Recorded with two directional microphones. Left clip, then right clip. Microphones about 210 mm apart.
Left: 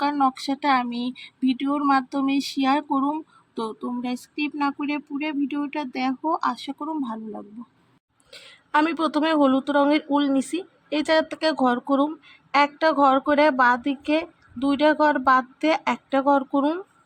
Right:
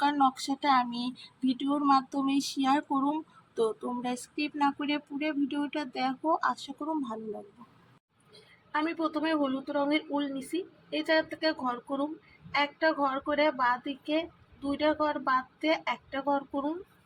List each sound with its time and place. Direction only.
0.0 s speech: 10° left (ahead or behind)
8.7 s speech: 45° left (ahead or behind)